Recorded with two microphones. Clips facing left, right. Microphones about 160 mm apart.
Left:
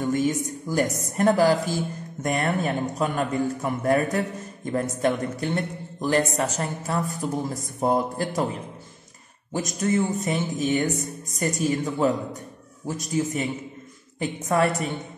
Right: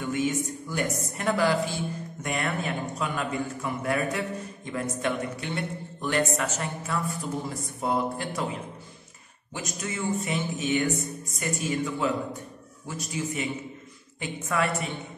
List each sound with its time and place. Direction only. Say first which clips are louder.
0.0 s speech: left 4 dB; 40° left (ahead or behind)